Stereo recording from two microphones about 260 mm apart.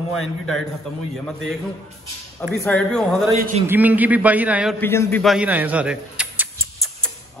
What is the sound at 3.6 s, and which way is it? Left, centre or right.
A man's voice, centre.